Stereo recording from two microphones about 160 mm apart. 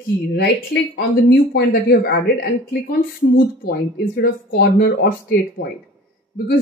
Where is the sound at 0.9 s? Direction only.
85° left.